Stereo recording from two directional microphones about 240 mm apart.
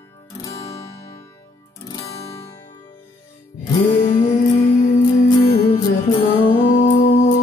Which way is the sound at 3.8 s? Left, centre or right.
Left.